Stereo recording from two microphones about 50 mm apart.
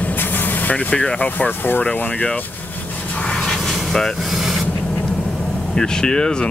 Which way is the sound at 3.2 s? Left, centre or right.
Centre.